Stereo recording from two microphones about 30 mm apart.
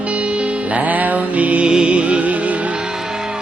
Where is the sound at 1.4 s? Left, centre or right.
Right.